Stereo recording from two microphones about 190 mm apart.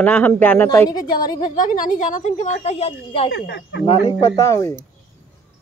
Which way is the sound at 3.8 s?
25° left (ahead or behind).